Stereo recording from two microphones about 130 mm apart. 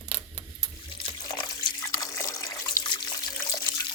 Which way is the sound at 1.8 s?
25° left (ahead or behind).